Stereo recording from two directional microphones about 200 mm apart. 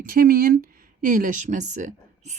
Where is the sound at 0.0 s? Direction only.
45° right (ahead or behind).